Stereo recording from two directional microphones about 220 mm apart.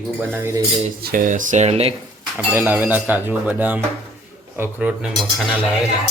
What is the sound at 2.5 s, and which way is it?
Speech, 10° right (ahead or behind).